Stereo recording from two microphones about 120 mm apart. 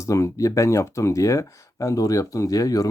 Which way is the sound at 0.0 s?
25° left (ahead or behind).